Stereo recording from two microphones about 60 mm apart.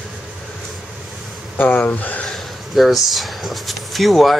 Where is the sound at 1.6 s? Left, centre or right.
Left.